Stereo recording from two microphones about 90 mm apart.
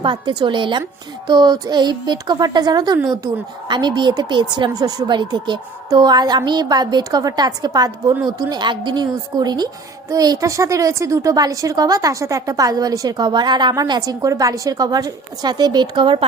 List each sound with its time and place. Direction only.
0.0 s a woman's voice: 60° right (ahead or behind)
1.3 s a woman's voice: 50° right (ahead or behind)
4.7 s a woman's voice: 45° right (ahead or behind); by 16.2 s 65° right (ahead or behind)